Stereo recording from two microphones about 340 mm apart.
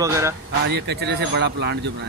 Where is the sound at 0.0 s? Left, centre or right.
Centre.